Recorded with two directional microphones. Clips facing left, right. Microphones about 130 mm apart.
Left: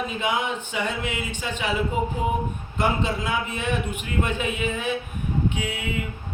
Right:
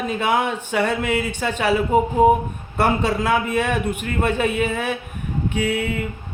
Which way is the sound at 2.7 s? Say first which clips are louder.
Right 5 dB; 65° right (ahead or behind).